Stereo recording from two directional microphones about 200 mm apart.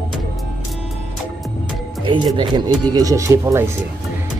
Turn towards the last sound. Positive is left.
turn(degrees=-15)  # may be behind; listen again after turning